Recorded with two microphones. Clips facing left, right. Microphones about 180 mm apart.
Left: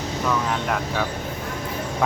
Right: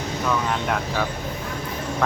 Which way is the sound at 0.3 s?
Centre (ahead or behind).